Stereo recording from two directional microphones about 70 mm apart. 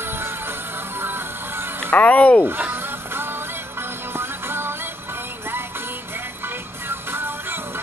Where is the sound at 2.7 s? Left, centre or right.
Right.